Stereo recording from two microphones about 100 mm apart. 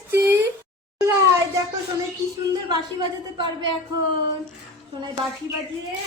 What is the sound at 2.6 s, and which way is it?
A woman's voice, 50° right (ahead or behind).